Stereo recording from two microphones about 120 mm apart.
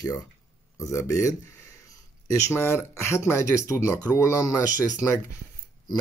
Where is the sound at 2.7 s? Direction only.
20° left (ahead or behind).